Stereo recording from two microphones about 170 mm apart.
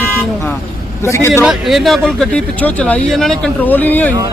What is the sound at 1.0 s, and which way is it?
Speech, 15° left (ahead or behind).